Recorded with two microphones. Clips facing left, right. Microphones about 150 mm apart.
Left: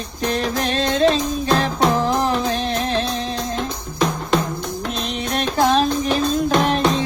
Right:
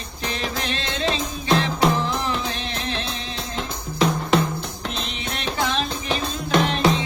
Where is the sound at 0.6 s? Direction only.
40° left (ahead or behind).